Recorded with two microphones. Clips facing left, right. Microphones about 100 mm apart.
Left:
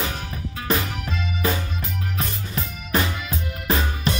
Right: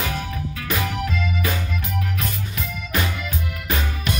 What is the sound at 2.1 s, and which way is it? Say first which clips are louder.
Music: even; 30° left (ahead or behind).